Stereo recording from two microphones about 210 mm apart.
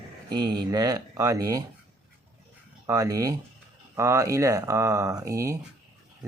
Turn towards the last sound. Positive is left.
turn(degrees=-15)  # may be behind; listen again after turning